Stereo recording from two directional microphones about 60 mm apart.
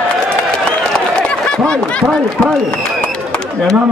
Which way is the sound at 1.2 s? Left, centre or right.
Centre.